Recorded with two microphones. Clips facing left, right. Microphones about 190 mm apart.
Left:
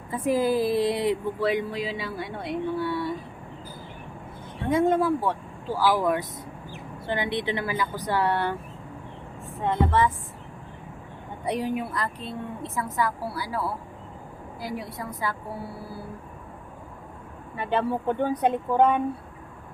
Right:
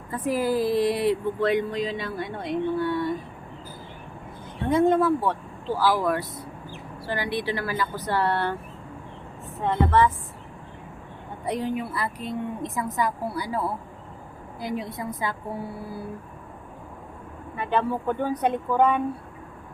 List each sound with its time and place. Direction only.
0.1 s speech: 15° left (ahead or behind)
0.6 s a woman's voice: 20° right (ahead or behind)
0.9 s speech: 20° left (ahead or behind)
1.4 s speech: 5° left (ahead or behind)
4.7 s speech: 10° left (ahead or behind)
9.6 s speech: 20° left (ahead or behind)
11.4 s a woman's voice: 10° left (ahead or behind); by 15.4 s 20° right (ahead or behind)
17.6 s speech: 30° left (ahead or behind)